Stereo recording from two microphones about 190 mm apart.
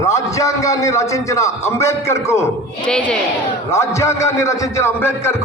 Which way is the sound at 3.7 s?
15° left (ahead or behind).